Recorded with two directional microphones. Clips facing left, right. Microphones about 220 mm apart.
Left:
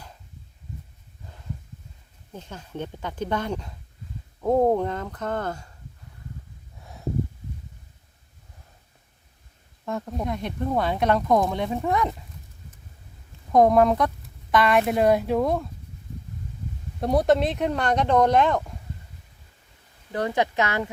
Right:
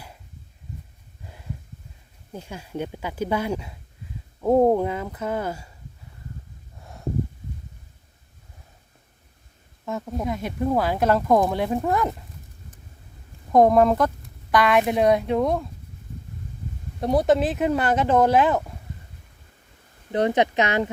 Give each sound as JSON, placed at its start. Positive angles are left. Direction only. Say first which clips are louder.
{"t": 2.3, "sound": "speech", "louder": "right 3 dB", "side_deg": -10}
{"t": 9.8, "sound": "speech", "louder": "right 1 dB", "side_deg": 0}
{"t": 13.5, "sound": "speech", "louder": "right 1 dB", "side_deg": 0}
{"t": 17.0, "sound": "speech", "louder": "right 1 dB", "side_deg": 0}
{"t": 20.1, "sound": "speech", "louder": "right 4 dB", "side_deg": -20}